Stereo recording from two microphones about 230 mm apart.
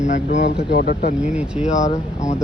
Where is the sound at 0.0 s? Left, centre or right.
Left.